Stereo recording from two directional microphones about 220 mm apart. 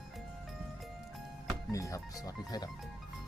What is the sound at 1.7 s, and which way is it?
Speech, 15° left (ahead or behind).